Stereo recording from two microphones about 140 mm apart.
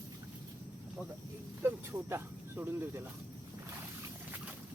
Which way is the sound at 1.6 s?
15° right (ahead or behind).